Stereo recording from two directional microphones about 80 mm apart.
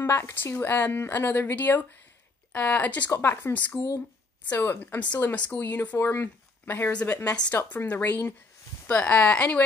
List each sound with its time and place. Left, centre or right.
0.0 s speech: left
7.6 s a woman's voice: left
8.8 s speech: centre